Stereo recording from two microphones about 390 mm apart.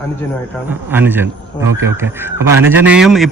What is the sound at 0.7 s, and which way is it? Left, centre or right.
A man's voice, centre.